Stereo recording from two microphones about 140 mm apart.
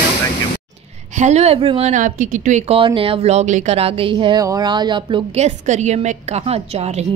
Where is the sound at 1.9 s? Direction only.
70° right (ahead or behind).